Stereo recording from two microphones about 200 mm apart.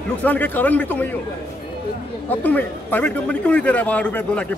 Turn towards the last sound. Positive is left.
turn(degrees=5)  # may be behind; listen again after turning